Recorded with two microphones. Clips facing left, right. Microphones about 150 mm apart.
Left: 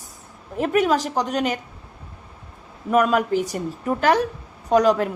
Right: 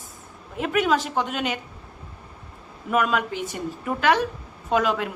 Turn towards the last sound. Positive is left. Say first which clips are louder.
# left 5 dB
turn(degrees=40)  # may be behind; listen again after turning